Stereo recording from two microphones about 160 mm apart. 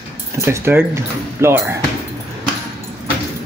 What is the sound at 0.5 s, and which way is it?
Speech, 15° right (ahead or behind).